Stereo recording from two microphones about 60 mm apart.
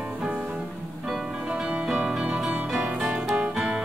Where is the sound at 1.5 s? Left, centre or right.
Centre.